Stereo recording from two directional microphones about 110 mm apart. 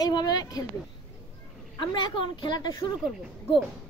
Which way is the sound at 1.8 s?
45° left (ahead or behind).